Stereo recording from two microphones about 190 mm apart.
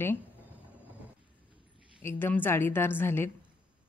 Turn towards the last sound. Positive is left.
turn(degrees=10)  # may be behind; listen again after turning